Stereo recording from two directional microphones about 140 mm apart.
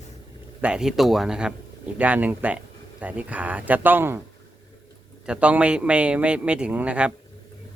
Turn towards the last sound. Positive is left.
turn(degrees=-10)  # may be behind; listen again after turning